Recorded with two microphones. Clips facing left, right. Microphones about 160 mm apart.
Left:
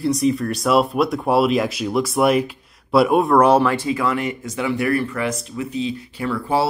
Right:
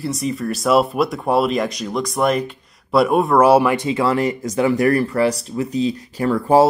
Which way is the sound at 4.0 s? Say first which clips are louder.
Right 4 dB; 35° right (ahead or behind).